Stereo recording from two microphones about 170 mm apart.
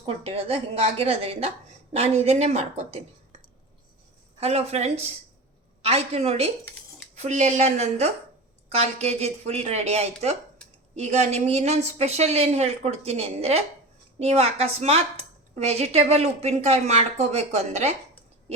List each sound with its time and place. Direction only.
0.0 s a woman's voice: 35° right (ahead or behind)